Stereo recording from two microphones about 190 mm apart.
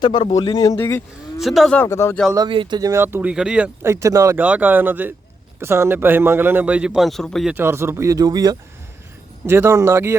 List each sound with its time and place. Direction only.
0.0 s a man's voice: 25° left (ahead or behind)
1.4 s speech: centre (ahead or behind)
2.3 s speech: 25° right (ahead or behind); by 7.5 s centre (ahead or behind)
7.5 s speech: 10° right (ahead or behind)